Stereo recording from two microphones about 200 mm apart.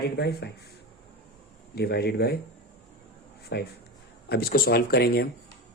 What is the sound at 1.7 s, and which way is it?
Speech, 50° left (ahead or behind).